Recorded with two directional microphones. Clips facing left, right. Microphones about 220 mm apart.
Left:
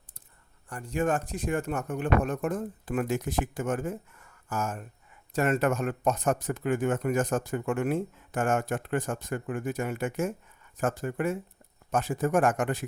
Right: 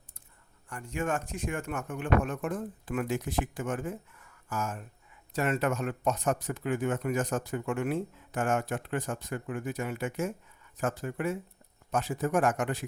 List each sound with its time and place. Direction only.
0.7 s speech: 35° left (ahead or behind)